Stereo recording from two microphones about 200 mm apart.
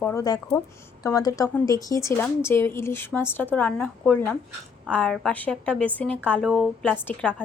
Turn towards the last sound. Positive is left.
turn(degrees=5)  # may be behind; listen again after turning